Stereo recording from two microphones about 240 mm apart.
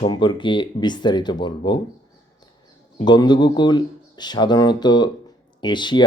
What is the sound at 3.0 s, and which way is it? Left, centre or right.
Speech, centre.